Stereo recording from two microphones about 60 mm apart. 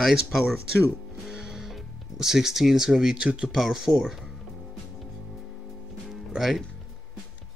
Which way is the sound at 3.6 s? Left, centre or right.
Centre.